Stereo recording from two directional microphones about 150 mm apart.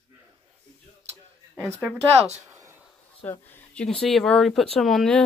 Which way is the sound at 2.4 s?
20° right (ahead or behind).